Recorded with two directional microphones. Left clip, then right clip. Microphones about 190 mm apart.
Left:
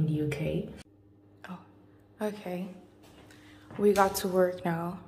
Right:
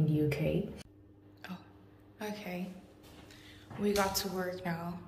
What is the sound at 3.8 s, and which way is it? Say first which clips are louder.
A woman's voice: left 7 dB; 35° left (ahead or behind).